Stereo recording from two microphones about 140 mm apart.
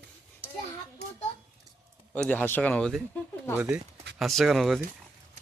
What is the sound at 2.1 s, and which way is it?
Speech, 10° left (ahead or behind).